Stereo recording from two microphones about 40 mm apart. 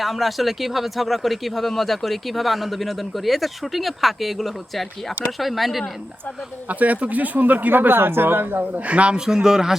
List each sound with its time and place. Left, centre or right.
0.0 s speech: centre
6.7 s speech: right
8.7 s a man's voice: right
9.1 s a man's voice: centre